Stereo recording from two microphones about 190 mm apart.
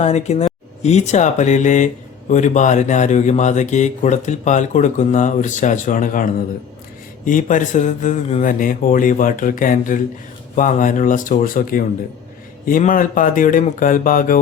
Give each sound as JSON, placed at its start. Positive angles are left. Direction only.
{"t": 0.0, "sound": "speech", "side_deg": 35}